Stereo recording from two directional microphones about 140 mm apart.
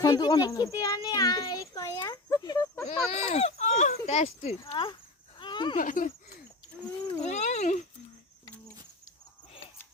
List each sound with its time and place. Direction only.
0.0 s a child's voice: 30° left (ahead or behind)
2.8 s speech: 50° left (ahead or behind)
4.7 s speech: 40° left (ahead or behind)
5.4 s a sound: 35° left (ahead or behind)
5.7 s speech: 70° left (ahead or behind)
7.2 s a sound: 55° left (ahead or behind)